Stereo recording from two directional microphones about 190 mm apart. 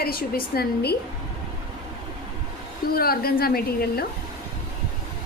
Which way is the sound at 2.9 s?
55° left (ahead or behind).